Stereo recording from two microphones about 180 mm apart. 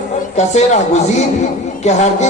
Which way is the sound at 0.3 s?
40° left (ahead or behind).